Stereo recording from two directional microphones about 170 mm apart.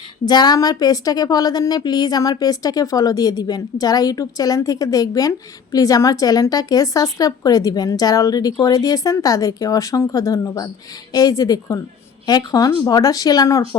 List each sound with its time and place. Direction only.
0.3 s a woman's voice: 25° left (ahead or behind)